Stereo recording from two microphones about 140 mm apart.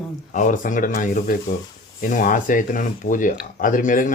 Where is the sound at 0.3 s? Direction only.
65° left (ahead or behind).